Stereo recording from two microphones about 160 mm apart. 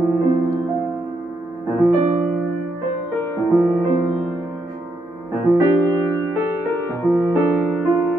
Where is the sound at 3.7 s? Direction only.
20° right (ahead or behind).